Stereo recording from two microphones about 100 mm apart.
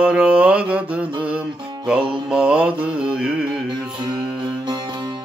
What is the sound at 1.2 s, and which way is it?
Music, 10° right (ahead or behind).